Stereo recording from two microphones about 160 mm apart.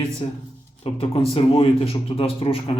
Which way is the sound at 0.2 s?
30° left (ahead or behind).